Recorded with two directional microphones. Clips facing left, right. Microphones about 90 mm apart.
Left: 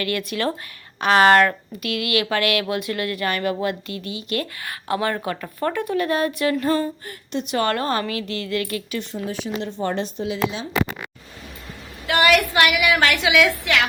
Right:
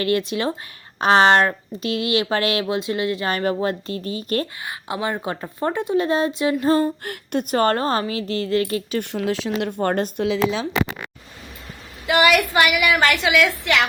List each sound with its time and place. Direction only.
0.0 s speech: 30° right (ahead or behind)
4.6 s speech: 20° right (ahead or behind)
6.7 s speech: 35° right (ahead or behind)
7.0 s speech: 65° right (ahead or behind)
7.4 s speech: 40° right (ahead or behind)
9.1 s speech: 90° right
9.8 s speech: 50° right (ahead or behind)
12.0 s a woman's voice: centre (ahead or behind)